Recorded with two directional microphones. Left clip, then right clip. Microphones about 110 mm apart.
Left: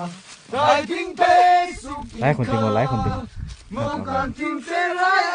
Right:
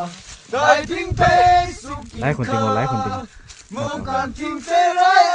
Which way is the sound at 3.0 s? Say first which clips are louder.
Right 2 dB; 25° left (ahead or behind).